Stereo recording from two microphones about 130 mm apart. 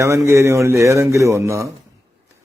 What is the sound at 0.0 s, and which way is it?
A man's voice, 20° right (ahead or behind).